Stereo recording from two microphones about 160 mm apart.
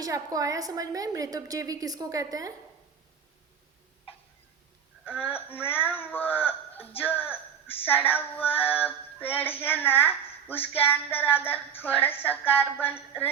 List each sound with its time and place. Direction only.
0.0 s a woman's voice: 20° right (ahead or behind)
5.2 s music: 10° left (ahead or behind)
5.6 s speech: 10° left (ahead or behind)
7.9 s music: 10° left (ahead or behind)